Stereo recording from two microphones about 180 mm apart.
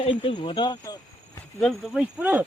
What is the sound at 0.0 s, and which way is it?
Speech, 30° left (ahead or behind).